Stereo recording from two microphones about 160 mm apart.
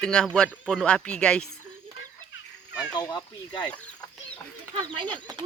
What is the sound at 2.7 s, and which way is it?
Speech, 25° left (ahead or behind).